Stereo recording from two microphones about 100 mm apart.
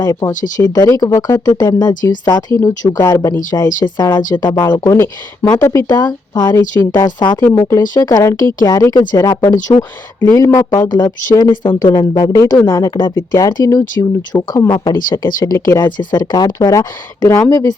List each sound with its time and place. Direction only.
0.0 s speech: 35° left (ahead or behind)
6.0 s speech: 45° left (ahead or behind)
6.6 s speech: 25° left (ahead or behind)
7.2 s speech: 50° left (ahead or behind)
9.7 s speech: 45° left (ahead or behind)
10.2 s speech: 25° left (ahead or behind)
15.5 s speech: 25° left (ahead or behind)
16.0 s speech: 40° left (ahead or behind)